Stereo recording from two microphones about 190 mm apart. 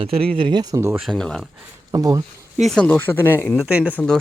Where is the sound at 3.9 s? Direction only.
5° left (ahead or behind).